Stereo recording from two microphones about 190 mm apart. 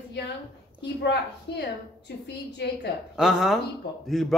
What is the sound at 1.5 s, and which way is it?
A woman's voice, 65° left (ahead or behind).